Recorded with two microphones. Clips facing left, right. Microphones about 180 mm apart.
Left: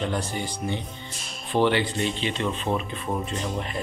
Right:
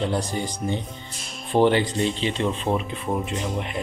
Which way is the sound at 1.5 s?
45° right (ahead or behind).